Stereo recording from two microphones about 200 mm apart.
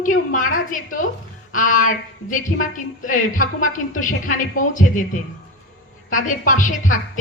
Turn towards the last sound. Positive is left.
turn(degrees=40)  # may be behind; listen again after turning